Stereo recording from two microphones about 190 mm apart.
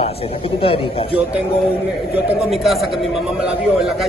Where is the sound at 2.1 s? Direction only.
Centre (ahead or behind).